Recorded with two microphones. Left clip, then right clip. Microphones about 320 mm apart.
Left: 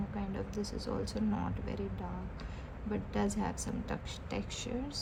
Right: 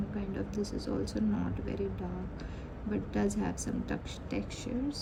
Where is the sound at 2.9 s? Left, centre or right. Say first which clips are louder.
Right 2 dB; left.